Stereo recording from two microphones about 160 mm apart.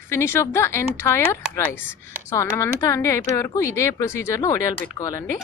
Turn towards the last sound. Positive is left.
turn(degrees=20)  # may be behind; listen again after turning